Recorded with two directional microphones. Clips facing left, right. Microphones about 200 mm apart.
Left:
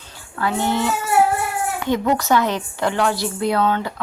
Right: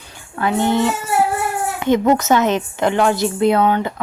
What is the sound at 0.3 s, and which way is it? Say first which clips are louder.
Speech: right 4 dB; 20° right (ahead or behind).